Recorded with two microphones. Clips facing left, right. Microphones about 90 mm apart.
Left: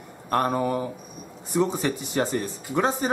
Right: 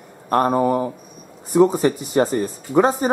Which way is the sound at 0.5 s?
20° right (ahead or behind).